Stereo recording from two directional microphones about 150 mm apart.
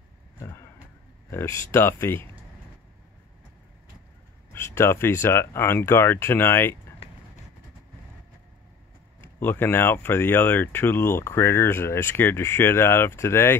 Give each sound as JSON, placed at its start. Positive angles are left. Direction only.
{"t": 1.3, "sound": "speech", "side_deg": 20}
{"t": 4.5, "sound": "speech", "side_deg": 15}
{"t": 7.0, "sound": "vehicle", "side_deg": 40}
{"t": 9.2, "sound": "speech", "side_deg": 15}